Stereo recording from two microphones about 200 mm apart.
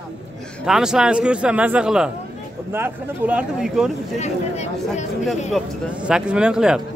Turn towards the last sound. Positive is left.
turn(degrees=-5)  # may be behind; listen again after turning